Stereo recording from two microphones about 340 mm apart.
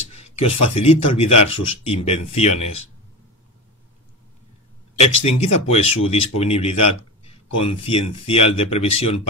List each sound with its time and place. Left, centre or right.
0.1 s a sound: centre
0.7 s speech: centre
4.9 s speech: centre